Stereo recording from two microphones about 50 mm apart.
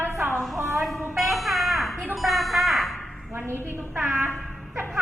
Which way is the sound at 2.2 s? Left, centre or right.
Centre.